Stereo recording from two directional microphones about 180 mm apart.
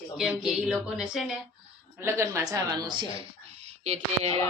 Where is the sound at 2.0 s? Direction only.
15° right (ahead or behind).